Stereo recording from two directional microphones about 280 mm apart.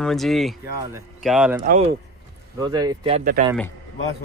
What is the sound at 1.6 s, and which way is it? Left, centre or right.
Speech, right.